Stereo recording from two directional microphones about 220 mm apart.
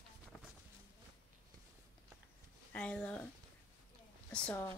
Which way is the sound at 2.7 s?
5° left (ahead or behind).